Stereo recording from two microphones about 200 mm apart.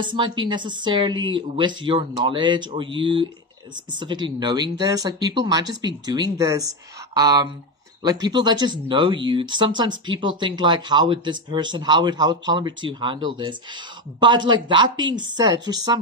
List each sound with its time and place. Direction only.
0.0 s speech: 25° right (ahead or behind)